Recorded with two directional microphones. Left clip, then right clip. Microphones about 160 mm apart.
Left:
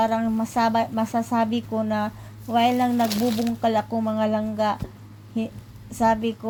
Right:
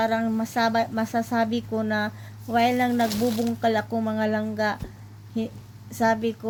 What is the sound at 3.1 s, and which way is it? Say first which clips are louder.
Speech: left 1 dB; 35° left (ahead or behind).